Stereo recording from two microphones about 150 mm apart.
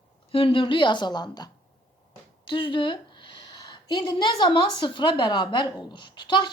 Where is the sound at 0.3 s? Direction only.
35° left (ahead or behind).